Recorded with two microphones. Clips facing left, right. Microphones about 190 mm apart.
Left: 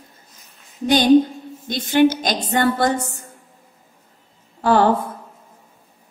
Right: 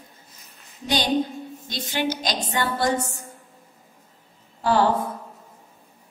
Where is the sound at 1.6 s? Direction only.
55° left (ahead or behind).